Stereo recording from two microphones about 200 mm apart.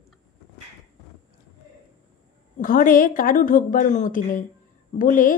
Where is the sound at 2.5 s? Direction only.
45° left (ahead or behind).